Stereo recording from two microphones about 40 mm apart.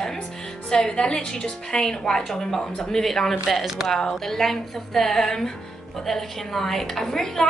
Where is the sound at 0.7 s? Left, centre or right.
Centre.